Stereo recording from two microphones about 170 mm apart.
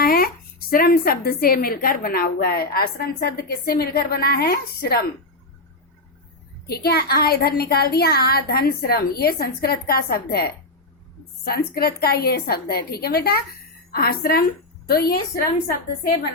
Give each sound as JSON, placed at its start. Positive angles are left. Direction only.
{"t": 0.0, "sound": "a sound", "side_deg": 60}
{"t": 0.7, "sound": "a woman's voice", "side_deg": 60}
{"t": 6.7, "sound": "a woman's voice", "side_deg": 65}